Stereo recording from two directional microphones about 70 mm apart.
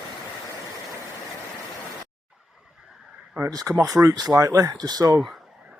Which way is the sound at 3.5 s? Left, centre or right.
Right.